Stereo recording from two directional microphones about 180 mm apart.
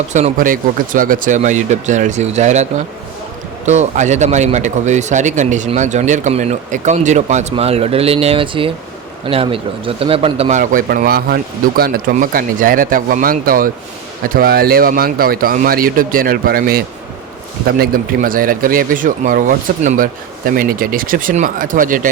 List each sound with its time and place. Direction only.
0.1 s speech: 40° right (ahead or behind)
10.6 s speech: 50° right (ahead or behind)